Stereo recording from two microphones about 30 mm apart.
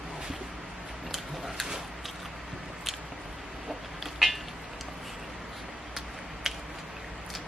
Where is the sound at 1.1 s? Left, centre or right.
Centre.